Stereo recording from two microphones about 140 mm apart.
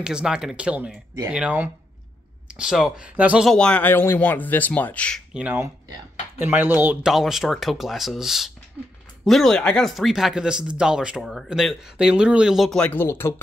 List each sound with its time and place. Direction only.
0.0 s speech: 5° right (ahead or behind)
3.4 s speech: 5° left (ahead or behind)
5.3 s speech: 10° right (ahead or behind)
7.1 s speech: centre (ahead or behind); by 13.3 s 15° left (ahead or behind)